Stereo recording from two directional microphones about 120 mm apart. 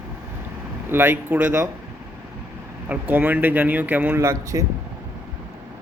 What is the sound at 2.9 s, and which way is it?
Speech, 15° right (ahead or behind).